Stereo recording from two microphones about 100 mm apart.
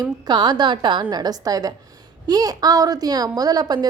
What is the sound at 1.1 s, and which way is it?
A woman's voice, 40° right (ahead or behind).